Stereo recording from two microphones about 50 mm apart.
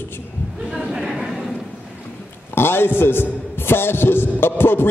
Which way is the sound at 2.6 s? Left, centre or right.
Left.